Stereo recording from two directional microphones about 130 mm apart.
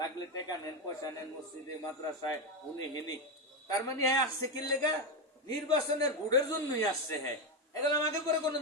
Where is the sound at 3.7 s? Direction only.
25° left (ahead or behind).